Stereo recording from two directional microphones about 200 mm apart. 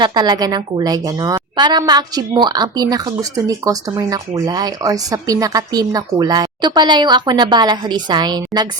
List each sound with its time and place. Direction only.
0.0 s a woman's voice: 20° right (ahead or behind)